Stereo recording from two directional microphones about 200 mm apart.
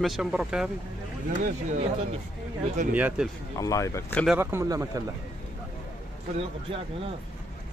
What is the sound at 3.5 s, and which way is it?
Speech, 15° left (ahead or behind).